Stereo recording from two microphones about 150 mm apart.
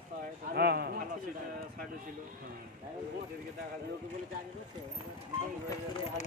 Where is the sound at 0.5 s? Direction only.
90° right.